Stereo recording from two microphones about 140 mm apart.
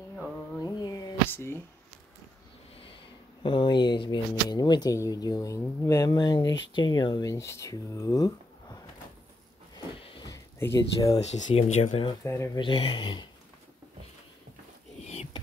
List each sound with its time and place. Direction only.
0.6 s a sound: 25° left (ahead or behind)
1.3 s speech: 15° left (ahead or behind)
3.4 s speech: 35° left (ahead or behind)
9.9 s a sound: 40° left (ahead or behind)
10.2 s a sound: 20° left (ahead or behind)
11.1 s speech: 55° left (ahead or behind)
12.2 s speech: 20° left (ahead or behind)
12.5 s speech: 40° left (ahead or behind)
15.0 s rodents: 55° left (ahead or behind)